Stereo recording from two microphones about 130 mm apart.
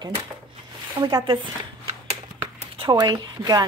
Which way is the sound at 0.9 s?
30° right (ahead or behind).